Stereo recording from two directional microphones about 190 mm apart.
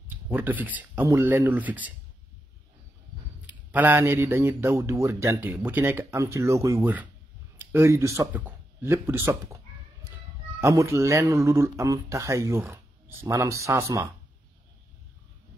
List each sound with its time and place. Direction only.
0.1 s speech: 10° right (ahead or behind)
3.4 s speech: 10° right (ahead or behind)
10.6 s speech: 15° right (ahead or behind)